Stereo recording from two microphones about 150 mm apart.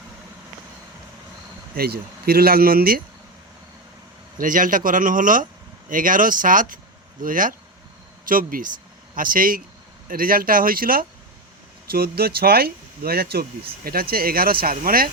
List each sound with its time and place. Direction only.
1.7 s speech: 90° right
4.4 s speech: 65° right (ahead or behind)
11.9 s speech: 90° right